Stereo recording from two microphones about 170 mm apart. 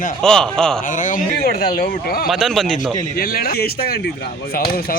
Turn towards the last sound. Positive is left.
turn(degrees=60)  # may be behind; listen again after turning